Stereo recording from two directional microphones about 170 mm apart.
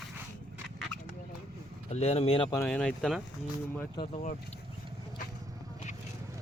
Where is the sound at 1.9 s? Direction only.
40° left (ahead or behind).